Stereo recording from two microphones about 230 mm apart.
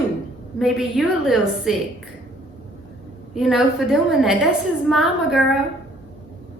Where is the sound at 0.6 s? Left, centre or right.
Centre.